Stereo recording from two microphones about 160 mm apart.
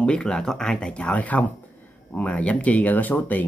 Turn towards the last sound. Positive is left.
turn(degrees=10)  # may be behind; listen again after turning